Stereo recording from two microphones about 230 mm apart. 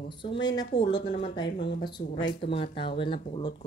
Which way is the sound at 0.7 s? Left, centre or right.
Left.